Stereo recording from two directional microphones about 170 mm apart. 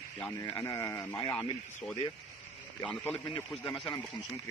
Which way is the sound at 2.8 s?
10° left (ahead or behind).